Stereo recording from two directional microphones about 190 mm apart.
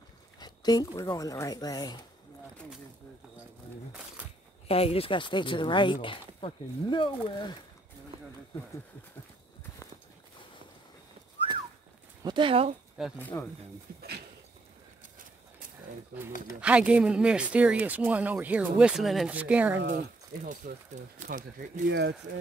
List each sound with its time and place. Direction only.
0.4 s speech: 20° left (ahead or behind)
4.6 s speech: 30° left (ahead or behind)
12.2 s speech: 25° right (ahead or behind)
13.2 s speech: 10° left (ahead or behind)
13.9 s speech: 50° right (ahead or behind)
16.6 s speech: 5° right (ahead or behind)
19.9 s speech: 45° right (ahead or behind)